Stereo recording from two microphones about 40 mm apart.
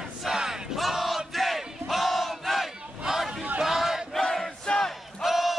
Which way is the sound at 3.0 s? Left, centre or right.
Centre.